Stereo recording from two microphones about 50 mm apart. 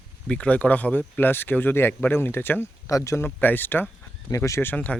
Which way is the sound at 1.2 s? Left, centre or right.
Left.